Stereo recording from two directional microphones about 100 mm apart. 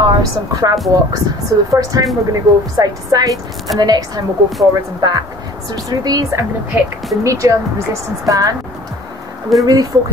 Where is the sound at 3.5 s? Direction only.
Centre (ahead or behind).